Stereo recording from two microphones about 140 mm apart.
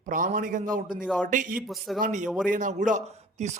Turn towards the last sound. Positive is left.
turn(degrees=-65)  # may be behind; listen again after turning